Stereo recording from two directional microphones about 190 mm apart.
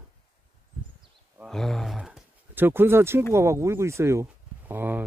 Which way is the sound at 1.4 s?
Centre (ahead or behind).